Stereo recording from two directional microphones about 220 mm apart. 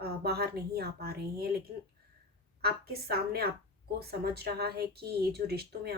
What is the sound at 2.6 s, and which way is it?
Speech, 45° right (ahead or behind).